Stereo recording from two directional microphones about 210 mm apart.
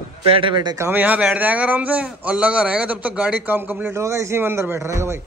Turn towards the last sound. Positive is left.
turn(degrees=-15)  # may be behind; listen again after turning